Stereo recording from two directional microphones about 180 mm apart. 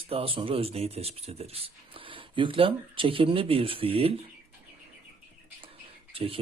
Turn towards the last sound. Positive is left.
turn(degrees=-30)  # may be behind; listen again after turning